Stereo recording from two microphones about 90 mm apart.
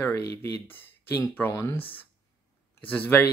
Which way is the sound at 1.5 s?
35° left (ahead or behind).